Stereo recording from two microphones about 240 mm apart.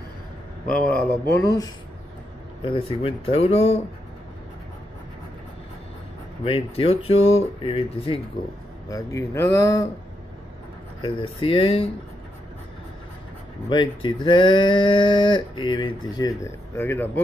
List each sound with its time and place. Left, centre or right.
0.8 s speech: centre; by 3.8 s left
6.4 s speech: left
11.1 s speech: left
13.7 s speech: centre